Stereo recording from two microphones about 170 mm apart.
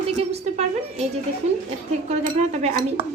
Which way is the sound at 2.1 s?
40° right (ahead or behind).